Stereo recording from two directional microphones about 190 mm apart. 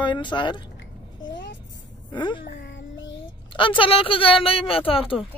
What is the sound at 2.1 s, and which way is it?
Speech, 25° left (ahead or behind).